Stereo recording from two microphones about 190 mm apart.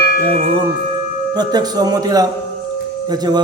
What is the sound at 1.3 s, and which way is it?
A man's voice, 20° right (ahead or behind).